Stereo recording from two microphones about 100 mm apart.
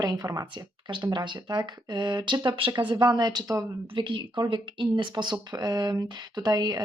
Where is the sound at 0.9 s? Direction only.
50° right (ahead or behind).